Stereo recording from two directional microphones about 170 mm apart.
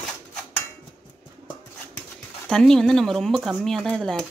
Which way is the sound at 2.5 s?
5° left (ahead or behind).